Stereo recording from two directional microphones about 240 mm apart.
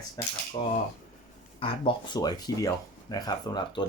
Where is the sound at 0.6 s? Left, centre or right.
Left.